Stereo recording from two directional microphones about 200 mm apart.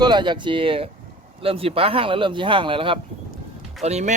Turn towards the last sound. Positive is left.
turn(degrees=-35)  # may be behind; listen again after turning